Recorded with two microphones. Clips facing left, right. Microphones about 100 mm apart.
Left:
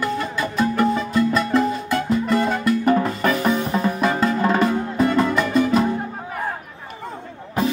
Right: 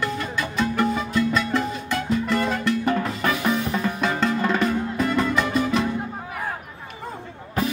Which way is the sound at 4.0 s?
5° left (ahead or behind).